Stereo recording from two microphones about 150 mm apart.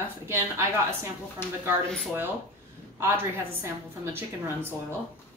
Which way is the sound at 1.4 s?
15° left (ahead or behind).